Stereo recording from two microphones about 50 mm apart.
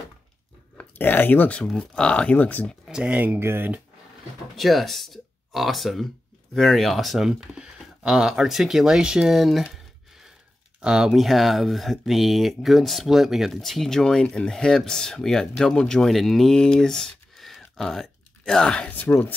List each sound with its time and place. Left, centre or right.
0.9 s speech: left
1.8 s speech: centre
2.3 s speech: left
2.9 s speech: right
3.3 s speech: right
4.6 s speech: centre
10.8 s speech: centre
11.1 s speech: centre
13.5 s speech: centre
18.9 s speech: left